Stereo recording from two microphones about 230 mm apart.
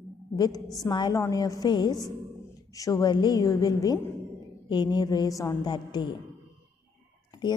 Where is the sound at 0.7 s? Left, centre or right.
Centre.